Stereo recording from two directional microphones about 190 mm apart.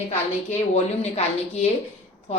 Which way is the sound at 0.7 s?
35° left (ahead or behind).